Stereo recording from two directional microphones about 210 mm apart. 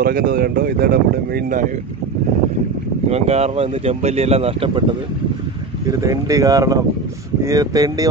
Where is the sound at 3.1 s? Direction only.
30° right (ahead or behind).